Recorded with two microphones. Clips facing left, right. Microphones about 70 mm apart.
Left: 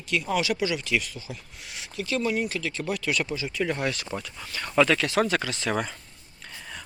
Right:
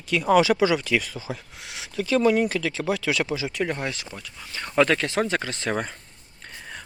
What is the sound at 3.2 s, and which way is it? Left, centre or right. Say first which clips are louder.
Speech: right 3 dB; right.